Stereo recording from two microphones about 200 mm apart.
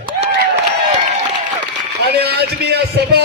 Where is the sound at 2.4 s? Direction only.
55° right (ahead or behind).